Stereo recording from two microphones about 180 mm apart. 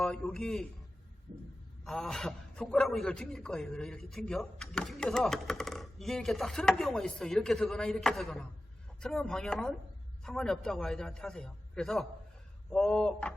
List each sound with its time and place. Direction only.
0.0 s a man's voice: centre (ahead or behind)
1.8 s a man's voice: 5° left (ahead or behind)